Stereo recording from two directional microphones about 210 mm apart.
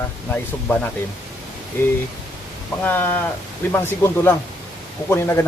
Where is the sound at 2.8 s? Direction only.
10° left (ahead or behind).